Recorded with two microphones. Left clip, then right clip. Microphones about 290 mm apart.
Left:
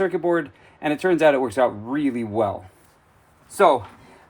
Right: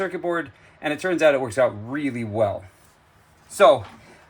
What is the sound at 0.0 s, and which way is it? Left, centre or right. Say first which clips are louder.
A man's voice: left 4 dB; left.